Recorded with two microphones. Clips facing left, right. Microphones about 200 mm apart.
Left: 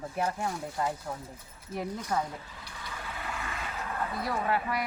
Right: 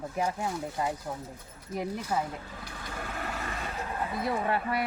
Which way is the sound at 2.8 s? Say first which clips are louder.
Right 3 dB; 50° right (ahead or behind).